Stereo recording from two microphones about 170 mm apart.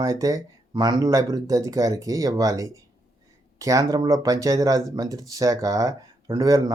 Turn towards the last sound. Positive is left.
turn(degrees=-20)  # may be behind; listen again after turning